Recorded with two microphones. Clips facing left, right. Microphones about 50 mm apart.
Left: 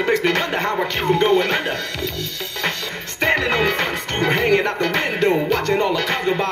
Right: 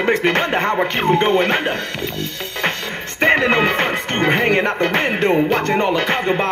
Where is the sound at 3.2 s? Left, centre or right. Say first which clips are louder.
Right 4 dB; right.